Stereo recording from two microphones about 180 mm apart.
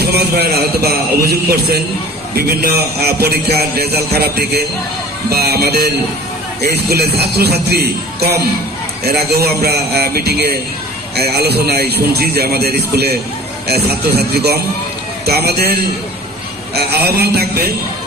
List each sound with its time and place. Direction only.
0.0 s a man's voice: 60° right (ahead or behind)